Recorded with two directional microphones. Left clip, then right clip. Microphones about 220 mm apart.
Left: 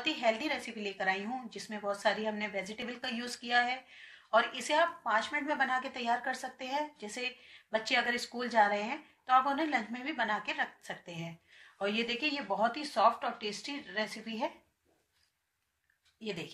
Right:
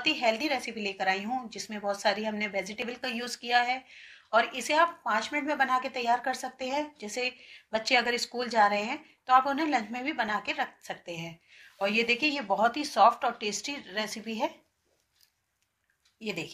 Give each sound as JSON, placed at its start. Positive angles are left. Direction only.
{"t": 0.0, "sound": "a woman's voice", "side_deg": -25}
{"t": 16.2, "sound": "a woman's voice", "side_deg": -30}